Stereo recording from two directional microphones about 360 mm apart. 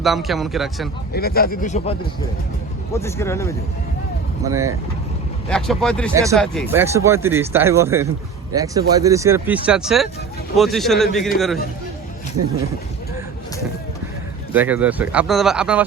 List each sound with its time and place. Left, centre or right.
0.0 s speech: centre
1.1 s speech: left
2.9 s speech: centre
5.5 s speech: centre
6.1 s speech: centre
14.5 s speech: centre